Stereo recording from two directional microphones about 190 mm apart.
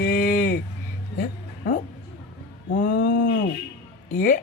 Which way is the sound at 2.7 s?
45° left (ahead or behind).